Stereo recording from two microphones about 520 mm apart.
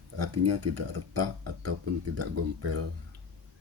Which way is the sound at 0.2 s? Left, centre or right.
Right.